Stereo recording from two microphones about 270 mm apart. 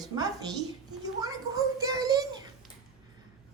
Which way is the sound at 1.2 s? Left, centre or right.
Centre.